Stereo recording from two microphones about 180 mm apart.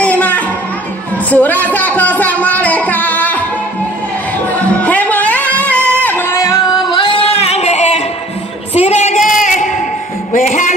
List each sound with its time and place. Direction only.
0.0 s music: 10° left (ahead or behind)
4.8 s music: 10° left (ahead or behind); by 8.0 s 40° left (ahead or behind)
8.7 s singing: 35° left (ahead or behind)
10.3 s a sound: 45° left (ahead or behind)